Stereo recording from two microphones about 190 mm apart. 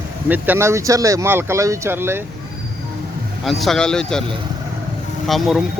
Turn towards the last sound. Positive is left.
turn(degrees=0)  # may be behind; listen again after turning